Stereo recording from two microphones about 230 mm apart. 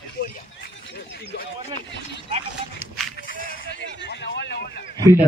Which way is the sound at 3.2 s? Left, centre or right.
Left.